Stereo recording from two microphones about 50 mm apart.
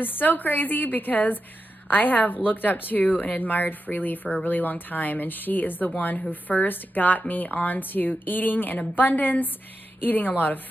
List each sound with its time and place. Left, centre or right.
0.0 s a woman's voice: left